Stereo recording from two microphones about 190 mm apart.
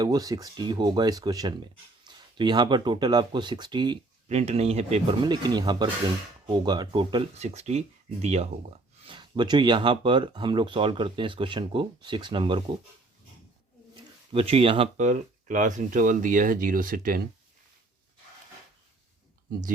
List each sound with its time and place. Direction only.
0.0 s speech: 20° right (ahead or behind)
4.3 s speech: 35° right (ahead or behind)
5.2 s speech: 20° right (ahead or behind)
7.3 s speech: 35° right (ahead or behind)
13.9 s speech: 30° right (ahead or behind); by 17.2 s 50° right (ahead or behind)